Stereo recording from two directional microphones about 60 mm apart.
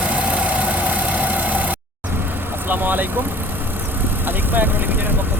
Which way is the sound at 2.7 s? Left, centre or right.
Right.